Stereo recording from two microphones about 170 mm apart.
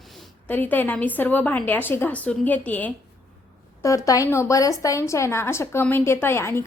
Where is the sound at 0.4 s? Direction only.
10° left (ahead or behind).